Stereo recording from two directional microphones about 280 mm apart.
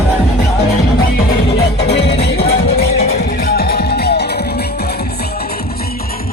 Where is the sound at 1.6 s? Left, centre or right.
Left.